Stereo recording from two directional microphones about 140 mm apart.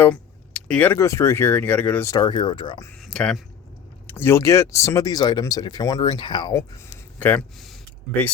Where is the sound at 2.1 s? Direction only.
30° left (ahead or behind).